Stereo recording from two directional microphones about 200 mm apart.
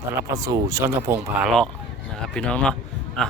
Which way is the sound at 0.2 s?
15° right (ahead or behind).